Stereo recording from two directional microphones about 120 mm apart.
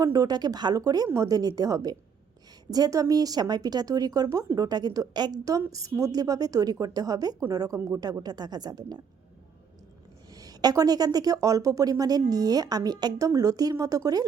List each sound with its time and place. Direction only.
0.0 s a woman's voice: 30° right (ahead or behind)
10.3 s a woman's voice: 30° right (ahead or behind)